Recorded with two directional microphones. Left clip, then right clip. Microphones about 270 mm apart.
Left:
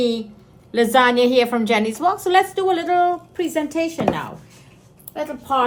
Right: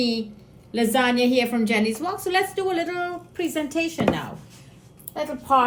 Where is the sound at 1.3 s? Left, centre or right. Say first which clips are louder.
Left 5 dB; left.